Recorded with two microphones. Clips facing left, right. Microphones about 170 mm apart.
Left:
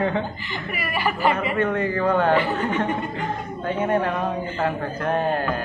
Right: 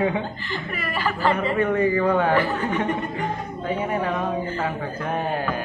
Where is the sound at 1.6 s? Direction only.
10° right (ahead or behind).